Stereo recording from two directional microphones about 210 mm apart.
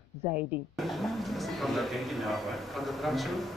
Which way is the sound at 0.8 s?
Centre (ahead or behind).